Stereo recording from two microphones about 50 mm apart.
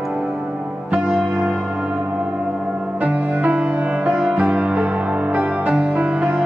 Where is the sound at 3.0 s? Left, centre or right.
Right.